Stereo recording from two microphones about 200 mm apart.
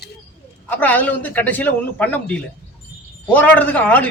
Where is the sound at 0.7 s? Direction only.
10° left (ahead or behind).